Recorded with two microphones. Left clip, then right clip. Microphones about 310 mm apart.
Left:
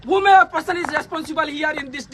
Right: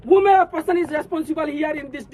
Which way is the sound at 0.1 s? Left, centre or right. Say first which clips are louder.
Left 1 dB; centre.